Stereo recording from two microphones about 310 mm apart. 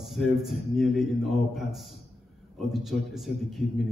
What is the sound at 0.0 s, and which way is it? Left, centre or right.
A man's voice, centre.